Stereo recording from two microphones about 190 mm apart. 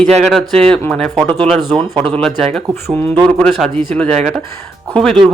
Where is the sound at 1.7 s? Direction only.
30° right (ahead or behind).